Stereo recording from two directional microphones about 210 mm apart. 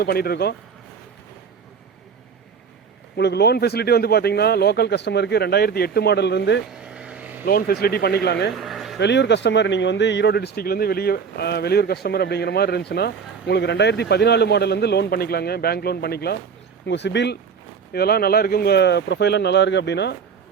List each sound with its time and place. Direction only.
0.0 s speech: 45° left (ahead or behind)
3.2 s speech: 50° left (ahead or behind)
6.8 s vehicle: 5° right (ahead or behind)
7.4 s speech: 45° left (ahead or behind)
8.5 s a sound: centre (ahead or behind)
9.0 s speech: 55° left (ahead or behind)